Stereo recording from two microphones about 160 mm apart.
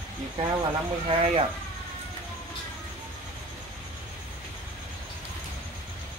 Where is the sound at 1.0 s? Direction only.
35° right (ahead or behind).